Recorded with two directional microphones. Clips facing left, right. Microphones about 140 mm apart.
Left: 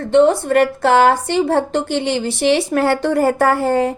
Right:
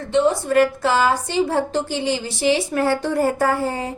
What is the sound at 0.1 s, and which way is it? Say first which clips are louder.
A woman's voice: left 5 dB; 60° left (ahead or behind).